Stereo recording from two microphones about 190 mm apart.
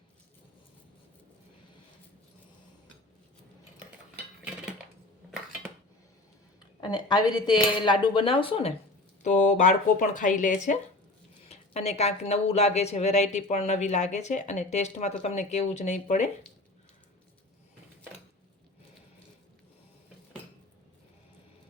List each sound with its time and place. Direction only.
6.8 s speech: 20° left (ahead or behind)
9.2 s speech: 40° left (ahead or behind)